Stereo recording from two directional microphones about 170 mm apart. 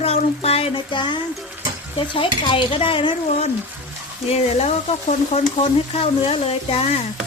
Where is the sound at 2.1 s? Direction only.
30° left (ahead or behind).